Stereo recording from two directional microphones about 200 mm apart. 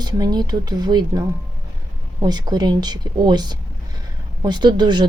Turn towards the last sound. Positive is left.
turn(degrees=-20)  # may be behind; listen again after turning